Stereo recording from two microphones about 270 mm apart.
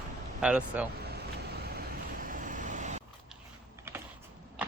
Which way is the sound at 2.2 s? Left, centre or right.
Right.